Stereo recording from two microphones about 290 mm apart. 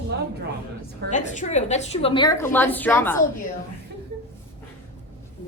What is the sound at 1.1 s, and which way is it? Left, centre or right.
A woman's voice, left.